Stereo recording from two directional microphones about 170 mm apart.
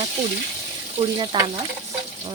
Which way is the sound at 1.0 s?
30° right (ahead or behind).